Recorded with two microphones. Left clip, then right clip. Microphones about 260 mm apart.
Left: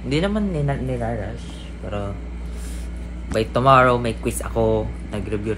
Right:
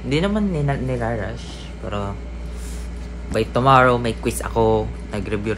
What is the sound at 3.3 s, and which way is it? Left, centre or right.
A man's voice, centre.